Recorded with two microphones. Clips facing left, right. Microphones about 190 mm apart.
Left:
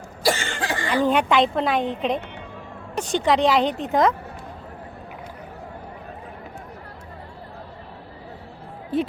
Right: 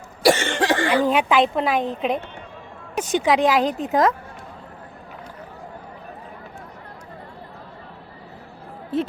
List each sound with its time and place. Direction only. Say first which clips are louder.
0.2 s cough: right 6 dB; 75° right (ahead or behind)
0.9 s a woman's voice: left 4 dB; 5° right (ahead or behind)